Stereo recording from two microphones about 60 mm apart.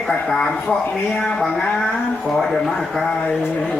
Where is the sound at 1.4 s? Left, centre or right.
Centre.